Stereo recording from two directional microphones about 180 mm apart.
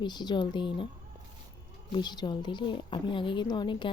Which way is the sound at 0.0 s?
25° left (ahead or behind).